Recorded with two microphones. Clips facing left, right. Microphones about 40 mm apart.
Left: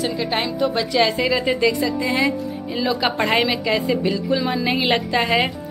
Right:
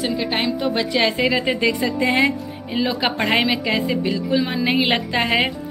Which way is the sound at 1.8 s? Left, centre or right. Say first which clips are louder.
Right 2 dB; right.